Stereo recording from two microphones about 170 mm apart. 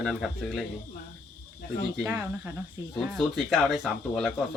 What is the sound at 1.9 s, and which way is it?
Speech, 10° right (ahead or behind).